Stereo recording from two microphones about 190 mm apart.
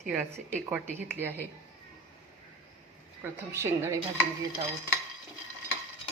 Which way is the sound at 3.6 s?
10° right (ahead or behind).